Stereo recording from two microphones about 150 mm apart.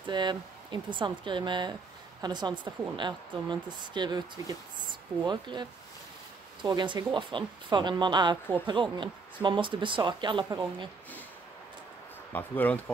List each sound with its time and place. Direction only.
0.1 s speech: 30° right (ahead or behind)
12.3 s speech: 10° left (ahead or behind)